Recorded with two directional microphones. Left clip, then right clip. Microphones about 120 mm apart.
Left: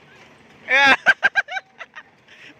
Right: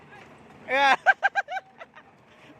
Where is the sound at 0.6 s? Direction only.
15° right (ahead or behind).